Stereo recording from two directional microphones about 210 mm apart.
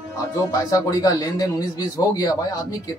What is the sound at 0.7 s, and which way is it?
A man's voice, 15° left (ahead or behind).